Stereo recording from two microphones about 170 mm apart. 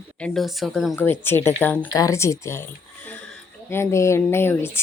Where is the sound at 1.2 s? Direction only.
15° left (ahead or behind).